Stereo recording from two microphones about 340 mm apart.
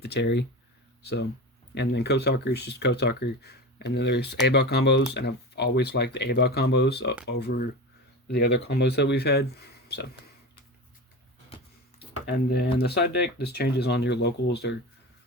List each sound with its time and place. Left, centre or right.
0.0 s speech: left
11.4 s a sound: centre
12.3 s speech: left